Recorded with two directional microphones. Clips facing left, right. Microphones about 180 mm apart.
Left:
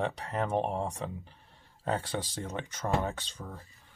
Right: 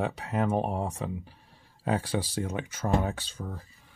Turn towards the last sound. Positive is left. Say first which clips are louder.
# right 3 dB
turn(degrees=-5)  # may be behind; listen again after turning